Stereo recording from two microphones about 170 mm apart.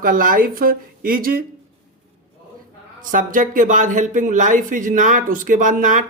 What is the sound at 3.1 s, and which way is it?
Speech, 50° right (ahead or behind).